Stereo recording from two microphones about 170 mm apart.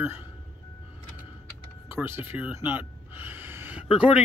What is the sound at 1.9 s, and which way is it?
Speech, 10° right (ahead or behind).